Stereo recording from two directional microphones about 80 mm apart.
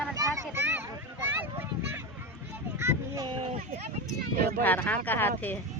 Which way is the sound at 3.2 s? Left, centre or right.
Right.